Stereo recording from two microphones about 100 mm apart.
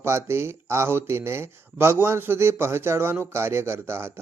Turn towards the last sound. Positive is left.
turn(degrees=-25)  # may be behind; listen again after turning